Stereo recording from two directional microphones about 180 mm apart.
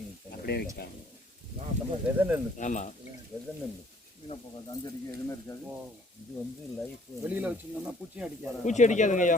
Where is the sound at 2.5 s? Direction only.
40° left (ahead or behind).